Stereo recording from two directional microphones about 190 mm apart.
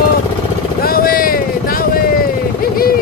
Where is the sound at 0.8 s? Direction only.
50° left (ahead or behind).